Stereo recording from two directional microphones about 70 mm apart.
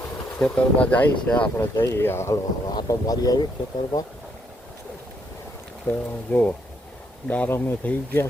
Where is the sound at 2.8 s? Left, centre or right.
Left.